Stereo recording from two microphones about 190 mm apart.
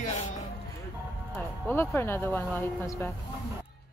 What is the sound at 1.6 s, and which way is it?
Speech, 10° left (ahead or behind).